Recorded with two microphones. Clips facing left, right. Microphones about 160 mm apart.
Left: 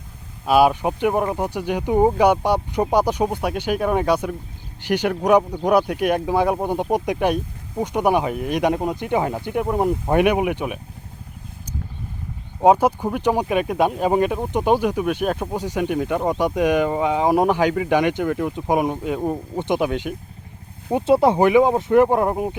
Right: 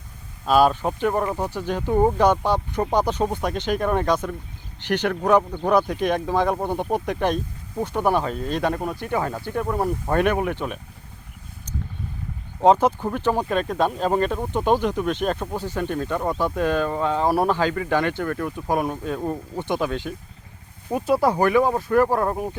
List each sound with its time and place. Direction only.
0.4 s speech: 10° left (ahead or behind)
12.5 s speech: 10° left (ahead or behind)